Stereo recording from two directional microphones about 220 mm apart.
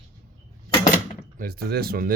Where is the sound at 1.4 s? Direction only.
45° right (ahead or behind).